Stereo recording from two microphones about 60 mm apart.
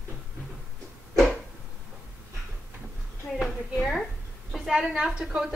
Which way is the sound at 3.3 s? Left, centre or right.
Centre.